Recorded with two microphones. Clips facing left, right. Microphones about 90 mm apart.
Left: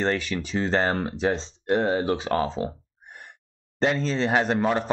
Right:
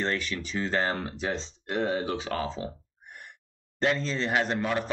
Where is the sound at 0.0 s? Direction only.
35° left (ahead or behind).